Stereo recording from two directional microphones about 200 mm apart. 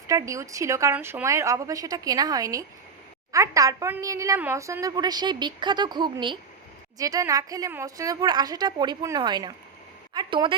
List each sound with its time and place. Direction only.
0.1 s a woman's voice: 15° right (ahead or behind)